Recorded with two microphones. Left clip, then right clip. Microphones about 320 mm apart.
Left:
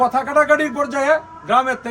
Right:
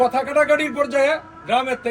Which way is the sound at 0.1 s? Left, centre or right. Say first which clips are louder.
Left 2 dB; left.